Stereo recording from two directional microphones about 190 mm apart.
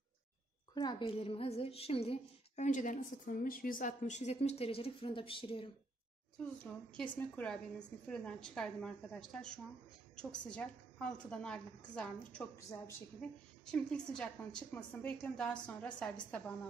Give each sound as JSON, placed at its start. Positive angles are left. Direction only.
{"t": 0.7, "sound": "a woman's voice", "side_deg": 25}
{"t": 6.4, "sound": "a woman's voice", "side_deg": 5}